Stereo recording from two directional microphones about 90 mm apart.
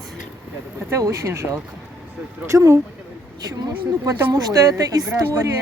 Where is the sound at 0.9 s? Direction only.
35° right (ahead or behind).